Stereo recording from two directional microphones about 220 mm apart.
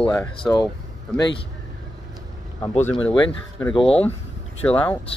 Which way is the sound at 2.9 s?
20° left (ahead or behind).